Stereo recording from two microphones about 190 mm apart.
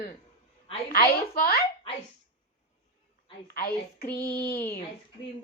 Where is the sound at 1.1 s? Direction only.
50° left (ahead or behind).